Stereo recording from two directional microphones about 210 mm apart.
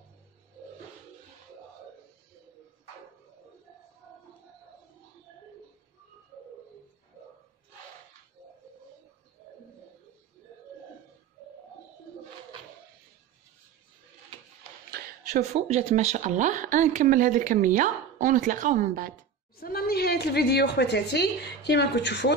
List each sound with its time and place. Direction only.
15.2 s speech: 35° right (ahead or behind)
19.5 s a woman's voice: 45° left (ahead or behind)